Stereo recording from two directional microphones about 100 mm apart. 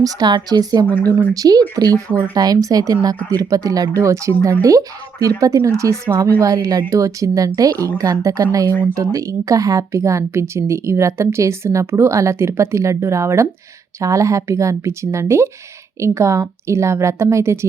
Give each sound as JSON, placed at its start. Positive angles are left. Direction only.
{"t": 0.0, "sound": "speech", "side_deg": -40}
{"t": 0.9, "sound": "speech", "side_deg": 20}
{"t": 1.3, "sound": "a woman's voice", "side_deg": -40}